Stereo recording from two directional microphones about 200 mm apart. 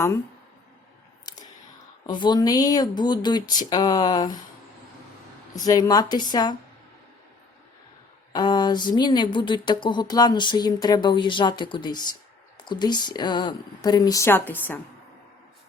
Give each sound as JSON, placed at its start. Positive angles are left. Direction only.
{"t": 1.2, "sound": "a sound", "side_deg": 20}
{"t": 2.0, "sound": "speech", "side_deg": 20}
{"t": 5.6, "sound": "speech", "side_deg": 20}
{"t": 8.3, "sound": "speech", "side_deg": 20}